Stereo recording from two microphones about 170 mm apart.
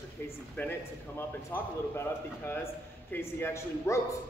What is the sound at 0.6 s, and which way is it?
A man's voice, 10° left (ahead or behind).